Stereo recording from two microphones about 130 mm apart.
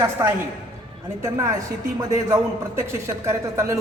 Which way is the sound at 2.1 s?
25° right (ahead or behind).